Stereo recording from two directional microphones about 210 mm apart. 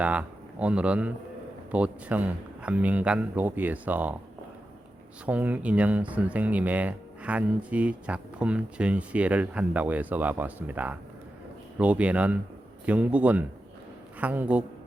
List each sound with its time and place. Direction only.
0.0 s speech: 5° right (ahead or behind)
5.2 s speech: 5° right (ahead or behind)